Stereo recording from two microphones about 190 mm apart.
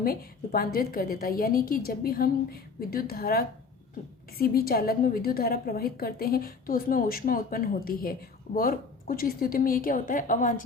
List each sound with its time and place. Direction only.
0.0 s a woman's voice: 50° left (ahead or behind)